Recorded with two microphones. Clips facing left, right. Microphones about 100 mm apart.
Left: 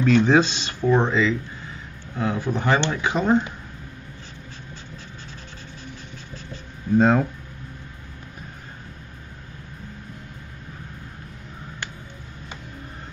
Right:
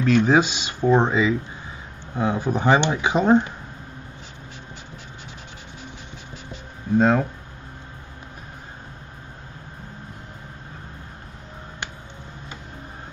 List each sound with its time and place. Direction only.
0.0 s speech: 5° right (ahead or behind); by 3.5 s 20° right (ahead or behind)
7.0 s speech: centre (ahead or behind)